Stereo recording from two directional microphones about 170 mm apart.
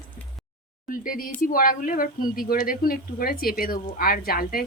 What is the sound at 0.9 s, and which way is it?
A woman's voice, 55° left (ahead or behind).